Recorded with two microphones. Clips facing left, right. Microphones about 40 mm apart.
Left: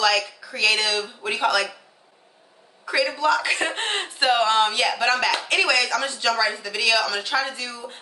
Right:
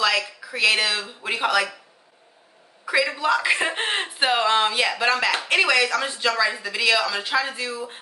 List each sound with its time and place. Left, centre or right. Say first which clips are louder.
0.4 s a man's voice: right 1 dB; centre
2.8 s a man's voice: even; centre